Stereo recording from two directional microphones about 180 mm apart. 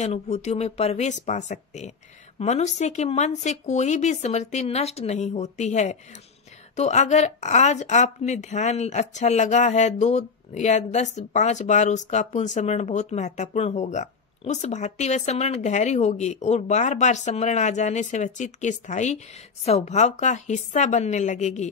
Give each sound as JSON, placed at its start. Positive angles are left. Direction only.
{"t": 0.0, "sound": "a woman's voice", "side_deg": 40}